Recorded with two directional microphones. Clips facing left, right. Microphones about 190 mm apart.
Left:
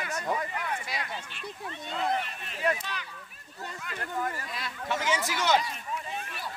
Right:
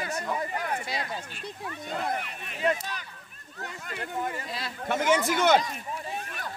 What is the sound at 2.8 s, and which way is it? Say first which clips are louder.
Speech: right 1 dB; 45° right (ahead or behind).